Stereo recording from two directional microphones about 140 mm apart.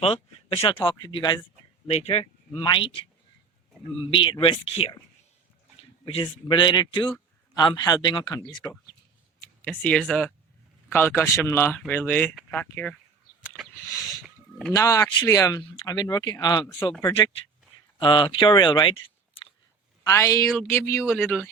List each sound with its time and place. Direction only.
0.0 s speech: 45° left (ahead or behind)
1.9 s speech: 45° left (ahead or behind)
2.6 s speech: 35° left (ahead or behind)
6.1 s speech: 35° left (ahead or behind); by 8.8 s 20° left (ahead or behind)
9.6 s speech: 10° left (ahead or behind)
13.8 s speech: 25° left (ahead or behind)
18.0 s speech: 35° left (ahead or behind)
20.1 s speech: 20° left (ahead or behind)